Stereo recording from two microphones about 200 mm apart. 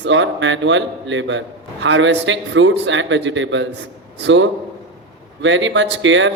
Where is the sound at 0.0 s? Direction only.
65° right (ahead or behind).